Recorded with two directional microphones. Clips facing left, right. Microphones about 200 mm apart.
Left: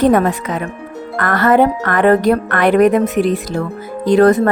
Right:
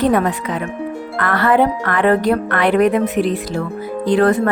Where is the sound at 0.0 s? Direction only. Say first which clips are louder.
Left 3 dB; 45° left (ahead or behind).